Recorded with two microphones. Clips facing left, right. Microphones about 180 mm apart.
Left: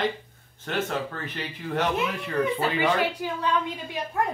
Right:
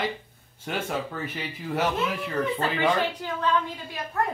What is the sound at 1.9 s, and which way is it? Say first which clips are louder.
A woman's voice: left 1 dB; 10° left (ahead or behind).